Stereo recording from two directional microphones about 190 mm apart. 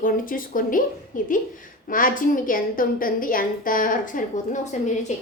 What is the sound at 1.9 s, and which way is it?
A woman's voice, 45° left (ahead or behind).